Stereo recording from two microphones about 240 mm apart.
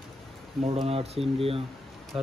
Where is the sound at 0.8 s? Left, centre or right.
Right.